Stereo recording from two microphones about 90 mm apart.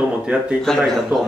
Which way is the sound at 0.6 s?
5° left (ahead or behind).